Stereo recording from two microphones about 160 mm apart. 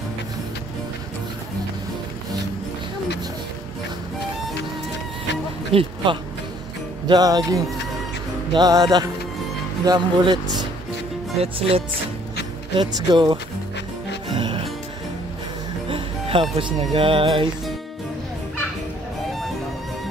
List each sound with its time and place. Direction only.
5.7 s speech: 35° right (ahead or behind)
7.1 s speech: 25° right (ahead or behind)
14.3 s music: 30° right (ahead or behind)
15.9 s speech: 35° right (ahead or behind)